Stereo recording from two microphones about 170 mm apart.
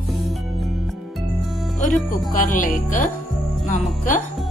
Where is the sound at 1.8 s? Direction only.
50° left (ahead or behind).